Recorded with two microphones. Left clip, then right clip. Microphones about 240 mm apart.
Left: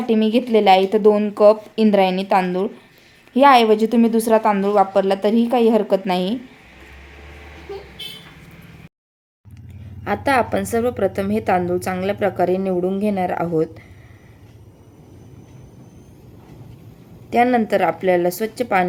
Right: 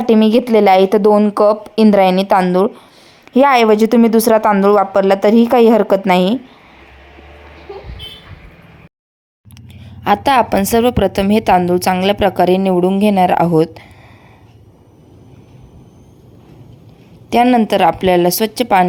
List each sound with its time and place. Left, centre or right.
0.0 s speech: right
10.0 s a woman's voice: right
17.2 s a woman's voice: right